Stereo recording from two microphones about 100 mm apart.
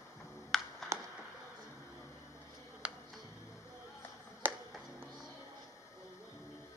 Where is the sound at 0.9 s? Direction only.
30° right (ahead or behind).